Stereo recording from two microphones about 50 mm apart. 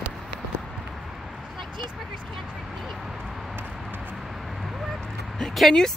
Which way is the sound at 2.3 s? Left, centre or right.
Centre.